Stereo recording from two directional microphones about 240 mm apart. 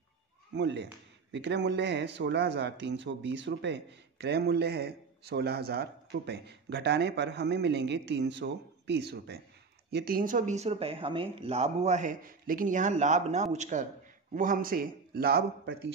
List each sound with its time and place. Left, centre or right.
0.6 s a man's voice: right